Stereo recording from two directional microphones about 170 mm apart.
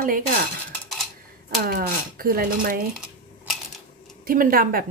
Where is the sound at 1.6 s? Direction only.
60° right (ahead or behind).